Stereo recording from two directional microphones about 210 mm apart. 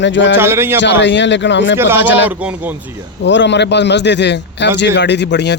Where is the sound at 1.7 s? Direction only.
10° right (ahead or behind).